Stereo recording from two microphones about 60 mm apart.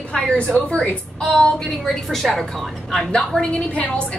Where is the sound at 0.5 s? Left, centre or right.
Centre.